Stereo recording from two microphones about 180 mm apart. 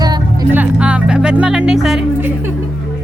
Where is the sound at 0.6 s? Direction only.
5° right (ahead or behind).